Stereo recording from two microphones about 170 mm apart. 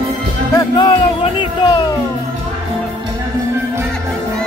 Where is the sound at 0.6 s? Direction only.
25° left (ahead or behind).